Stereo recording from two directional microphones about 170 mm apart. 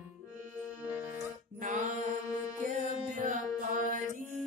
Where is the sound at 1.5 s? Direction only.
50° right (ahead or behind).